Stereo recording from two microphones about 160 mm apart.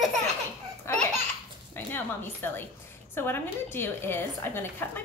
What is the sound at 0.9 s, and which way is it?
A woman's voice, 15° left (ahead or behind).